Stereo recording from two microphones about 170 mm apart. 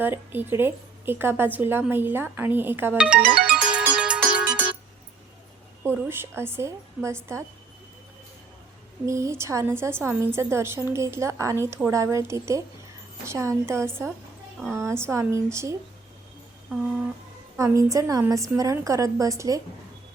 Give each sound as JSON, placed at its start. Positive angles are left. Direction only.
{"t": 0.0, "sound": "a woman's voice", "side_deg": -10}
{"t": 3.4, "sound": "music", "side_deg": -5}
{"t": 5.8, "sound": "a woman's voice", "side_deg": -15}
{"t": 9.0, "sound": "a woman's voice", "side_deg": -15}
{"t": 17.6, "sound": "a woman's voice", "side_deg": -20}